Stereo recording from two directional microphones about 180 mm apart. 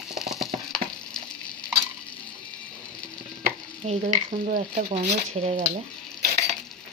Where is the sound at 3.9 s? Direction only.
35° right (ahead or behind).